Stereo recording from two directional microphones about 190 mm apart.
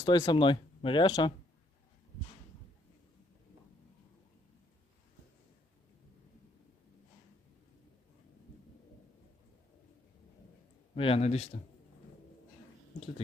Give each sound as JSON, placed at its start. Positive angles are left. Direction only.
{"t": 0.0, "sound": "speech", "side_deg": 20}
{"t": 10.9, "sound": "speech", "side_deg": 30}